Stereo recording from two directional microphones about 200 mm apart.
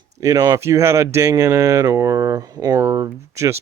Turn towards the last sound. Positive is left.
turn(degrees=-15)  # may be behind; listen again after turning